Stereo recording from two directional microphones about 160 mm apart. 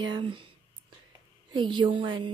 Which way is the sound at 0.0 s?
30° right (ahead or behind).